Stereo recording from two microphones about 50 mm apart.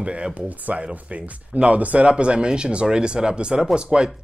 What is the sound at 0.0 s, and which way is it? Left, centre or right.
Speech, right.